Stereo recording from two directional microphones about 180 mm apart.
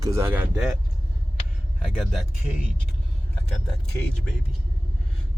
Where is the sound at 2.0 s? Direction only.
Centre (ahead or behind).